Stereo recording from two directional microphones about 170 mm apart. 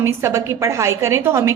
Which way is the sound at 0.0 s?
15° right (ahead or behind).